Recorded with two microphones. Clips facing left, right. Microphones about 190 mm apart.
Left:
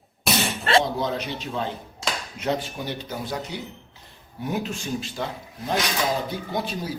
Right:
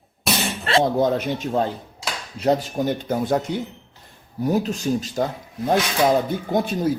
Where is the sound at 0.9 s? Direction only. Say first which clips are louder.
Right 7 dB; 50° right (ahead or behind).